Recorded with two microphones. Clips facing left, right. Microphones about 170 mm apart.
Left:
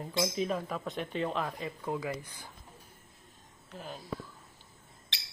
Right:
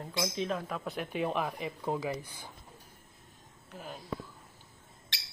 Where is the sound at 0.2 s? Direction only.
5° left (ahead or behind).